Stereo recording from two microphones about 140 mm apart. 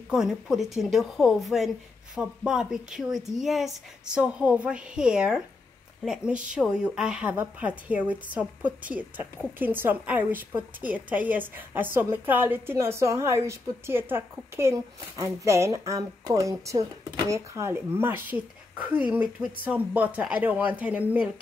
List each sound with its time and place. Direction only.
0.1 s a woman's voice: 5° right (ahead or behind)